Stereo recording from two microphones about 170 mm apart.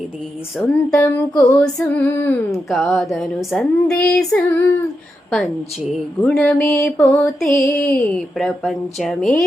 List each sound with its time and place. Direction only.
0.5 s speech: 5° left (ahead or behind)
0.9 s female singing: 15° left (ahead or behind)
1.5 s female singing: 10° left (ahead or behind)
2.6 s speech: centre (ahead or behind)
6.2 s speech: 5° left (ahead or behind)